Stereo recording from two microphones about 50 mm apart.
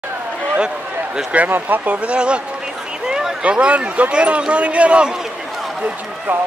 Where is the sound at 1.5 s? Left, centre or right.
Right.